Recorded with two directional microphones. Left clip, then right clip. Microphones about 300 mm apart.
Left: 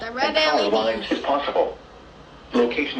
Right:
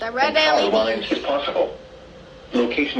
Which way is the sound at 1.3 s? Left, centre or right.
Left.